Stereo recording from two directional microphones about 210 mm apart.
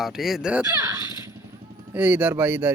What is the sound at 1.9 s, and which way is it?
Speech, 5° right (ahead or behind).